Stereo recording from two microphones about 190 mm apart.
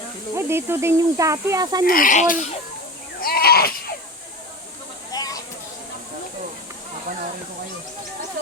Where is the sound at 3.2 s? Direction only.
50° left (ahead or behind).